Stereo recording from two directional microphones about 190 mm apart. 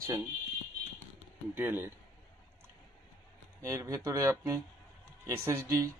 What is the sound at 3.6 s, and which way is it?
Speech, 15° right (ahead or behind).